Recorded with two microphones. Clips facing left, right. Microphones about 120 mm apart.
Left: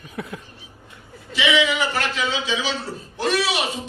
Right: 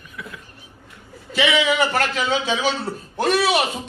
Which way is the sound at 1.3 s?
55° right (ahead or behind).